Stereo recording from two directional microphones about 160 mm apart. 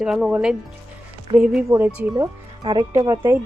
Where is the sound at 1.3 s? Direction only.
30° right (ahead or behind).